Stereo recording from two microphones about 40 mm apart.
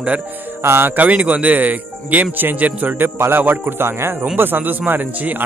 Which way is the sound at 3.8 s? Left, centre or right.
Right.